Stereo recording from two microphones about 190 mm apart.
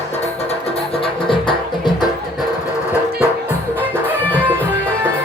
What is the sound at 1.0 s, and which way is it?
Music, 25° left (ahead or behind).